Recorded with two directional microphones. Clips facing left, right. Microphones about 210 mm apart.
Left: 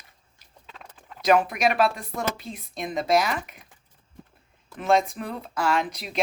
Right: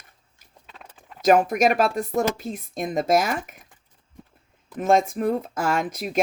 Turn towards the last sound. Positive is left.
turn(degrees=-45)  # may be behind; listen again after turning